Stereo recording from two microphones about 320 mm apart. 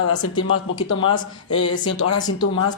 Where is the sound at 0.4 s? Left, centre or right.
Left.